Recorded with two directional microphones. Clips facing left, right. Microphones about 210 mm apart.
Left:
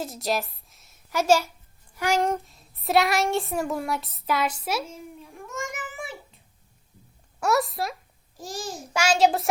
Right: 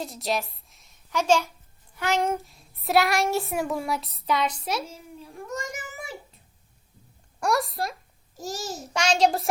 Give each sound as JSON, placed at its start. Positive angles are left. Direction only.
{"t": 0.0, "sound": "a woman's voice", "side_deg": 0}
{"t": 5.2, "sound": "child singing", "side_deg": -35}
{"t": 7.3, "sound": "speech", "side_deg": 0}
{"t": 8.4, "sound": "a child's voice", "side_deg": -40}
{"t": 8.8, "sound": "a child's voice", "side_deg": 5}